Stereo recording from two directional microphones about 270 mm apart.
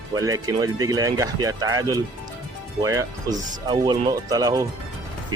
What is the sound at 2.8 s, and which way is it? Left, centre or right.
Speech, centre.